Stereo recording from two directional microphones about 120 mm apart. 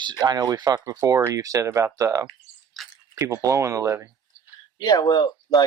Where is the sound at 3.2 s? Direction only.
25° right (ahead or behind).